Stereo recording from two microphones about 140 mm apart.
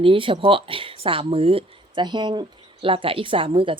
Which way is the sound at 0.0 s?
40° right (ahead or behind).